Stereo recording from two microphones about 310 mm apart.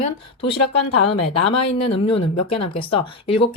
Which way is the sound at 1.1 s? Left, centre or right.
Left.